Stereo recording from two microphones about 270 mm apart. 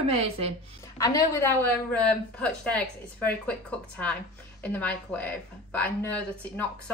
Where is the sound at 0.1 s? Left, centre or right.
Right.